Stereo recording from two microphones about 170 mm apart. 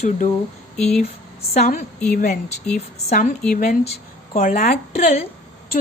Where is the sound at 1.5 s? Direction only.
45° left (ahead or behind).